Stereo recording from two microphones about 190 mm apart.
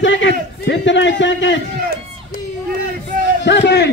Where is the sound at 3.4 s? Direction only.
65° left (ahead or behind).